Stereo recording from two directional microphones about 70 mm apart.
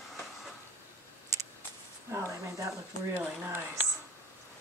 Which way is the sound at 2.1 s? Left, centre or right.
Right.